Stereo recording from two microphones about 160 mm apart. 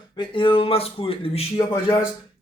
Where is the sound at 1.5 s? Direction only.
20° left (ahead or behind).